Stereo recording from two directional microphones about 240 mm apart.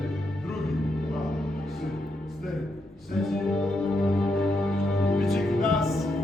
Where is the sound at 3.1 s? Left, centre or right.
Centre.